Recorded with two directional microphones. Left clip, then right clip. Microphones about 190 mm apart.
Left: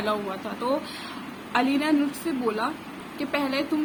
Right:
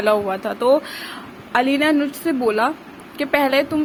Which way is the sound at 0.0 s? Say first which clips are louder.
Right 10 dB; 40° right (ahead or behind).